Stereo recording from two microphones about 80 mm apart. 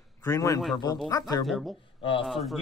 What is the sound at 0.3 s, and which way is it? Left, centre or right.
Speech, left.